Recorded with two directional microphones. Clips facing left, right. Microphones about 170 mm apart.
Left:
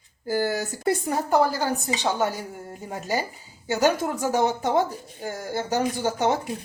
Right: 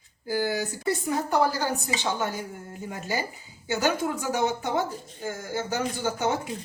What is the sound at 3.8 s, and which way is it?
A woman's voice, 40° left (ahead or behind).